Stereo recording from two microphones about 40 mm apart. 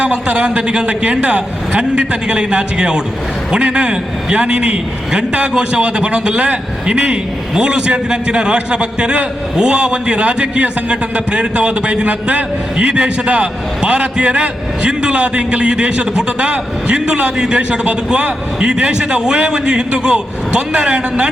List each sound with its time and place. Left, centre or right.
0.0 s a man's voice: right